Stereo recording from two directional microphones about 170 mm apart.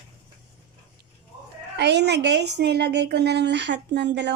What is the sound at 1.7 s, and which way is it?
A woman's voice, 85° right.